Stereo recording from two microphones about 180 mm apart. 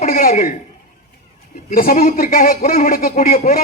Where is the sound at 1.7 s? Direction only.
50° left (ahead or behind).